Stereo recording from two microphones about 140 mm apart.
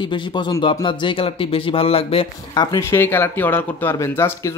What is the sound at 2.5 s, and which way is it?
Speech, 30° left (ahead or behind).